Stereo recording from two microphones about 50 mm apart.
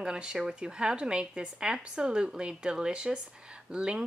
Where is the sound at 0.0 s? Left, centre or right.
Centre.